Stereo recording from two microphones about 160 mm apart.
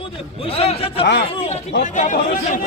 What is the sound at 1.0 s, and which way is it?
Speech, 90° left.